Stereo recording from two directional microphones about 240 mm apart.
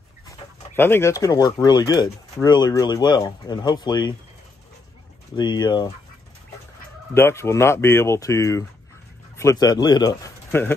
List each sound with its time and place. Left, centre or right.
0.7 s speech: centre
5.3 s speech: centre
7.2 s speech: centre